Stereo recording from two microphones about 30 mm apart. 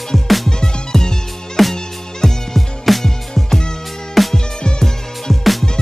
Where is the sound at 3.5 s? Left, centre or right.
Centre.